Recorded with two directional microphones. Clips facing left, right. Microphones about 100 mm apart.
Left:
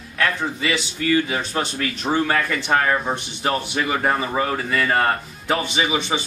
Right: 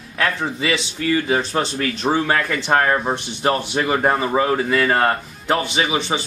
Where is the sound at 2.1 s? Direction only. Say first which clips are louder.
Left 1 dB; 5° right (ahead or behind).